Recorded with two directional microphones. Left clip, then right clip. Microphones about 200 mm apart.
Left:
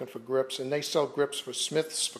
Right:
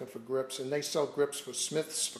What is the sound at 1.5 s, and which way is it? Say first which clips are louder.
Speech: left 4 dB; 20° left (ahead or behind).